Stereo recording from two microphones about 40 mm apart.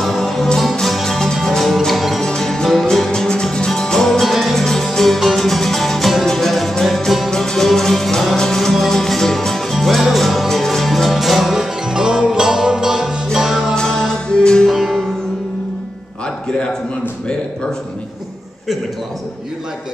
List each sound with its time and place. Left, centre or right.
0.0 s music: centre
3.1 s music: centre
4.3 s music: centre
4.6 s music: centre
13.7 s music: centre
14.7 s music: centre